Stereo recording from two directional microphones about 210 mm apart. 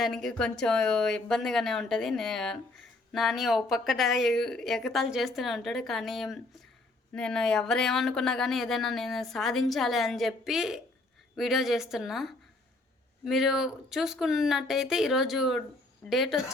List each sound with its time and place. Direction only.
0.0 s speech: centre (ahead or behind)